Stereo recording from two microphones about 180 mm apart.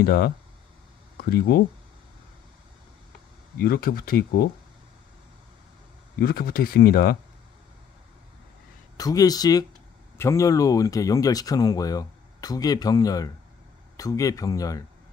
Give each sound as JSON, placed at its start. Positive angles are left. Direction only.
{"t": 0.0, "sound": "speech", "side_deg": 60}
{"t": 3.5, "sound": "speech", "side_deg": 55}
{"t": 6.1, "sound": "speech", "side_deg": 55}
{"t": 8.9, "sound": "speech", "side_deg": 20}